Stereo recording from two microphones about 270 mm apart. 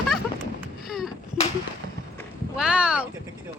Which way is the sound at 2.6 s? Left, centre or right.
Centre.